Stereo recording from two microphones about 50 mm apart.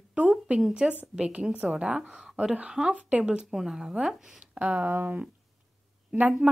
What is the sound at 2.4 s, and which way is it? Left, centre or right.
Speech, centre.